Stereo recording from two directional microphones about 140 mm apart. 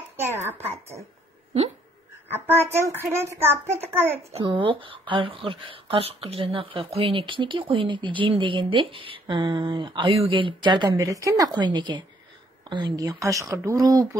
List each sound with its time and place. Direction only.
0.5 s speech: 15° right (ahead or behind)
2.3 s speech: 15° right (ahead or behind)
4.3 s speech: 40° right (ahead or behind)